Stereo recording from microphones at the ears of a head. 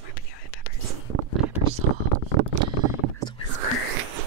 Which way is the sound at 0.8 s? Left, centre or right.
Right.